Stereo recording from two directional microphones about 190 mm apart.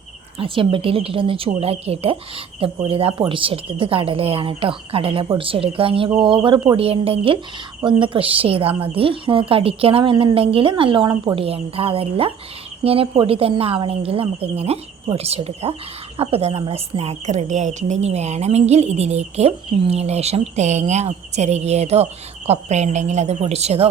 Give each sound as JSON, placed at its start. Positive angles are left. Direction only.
{"t": 0.3, "sound": "a woman's voice", "side_deg": -30}